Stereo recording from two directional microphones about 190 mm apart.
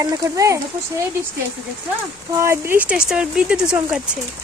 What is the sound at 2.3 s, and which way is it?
Speech, 15° right (ahead or behind).